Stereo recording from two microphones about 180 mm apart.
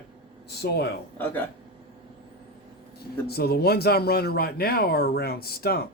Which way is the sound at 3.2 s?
60° left (ahead or behind).